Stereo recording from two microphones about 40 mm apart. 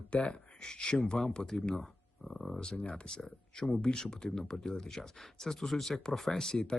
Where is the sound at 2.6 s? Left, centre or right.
Left.